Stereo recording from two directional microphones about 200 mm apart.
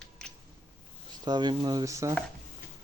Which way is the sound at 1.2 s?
20° right (ahead or behind).